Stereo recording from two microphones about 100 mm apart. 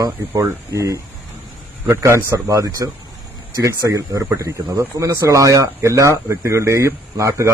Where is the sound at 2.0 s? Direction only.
30° right (ahead or behind).